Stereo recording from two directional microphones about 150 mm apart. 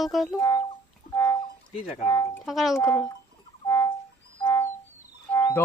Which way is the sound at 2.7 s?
20° left (ahead or behind).